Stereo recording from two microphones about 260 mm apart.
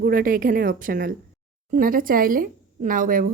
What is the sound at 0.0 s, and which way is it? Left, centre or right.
A woman's voice, right.